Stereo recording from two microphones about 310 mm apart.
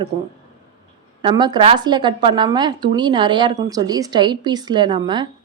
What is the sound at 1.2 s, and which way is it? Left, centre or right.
A woman's voice, centre.